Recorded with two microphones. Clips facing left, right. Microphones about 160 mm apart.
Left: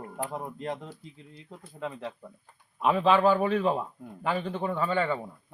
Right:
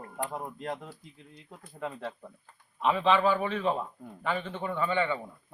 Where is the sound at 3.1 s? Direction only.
40° left (ahead or behind).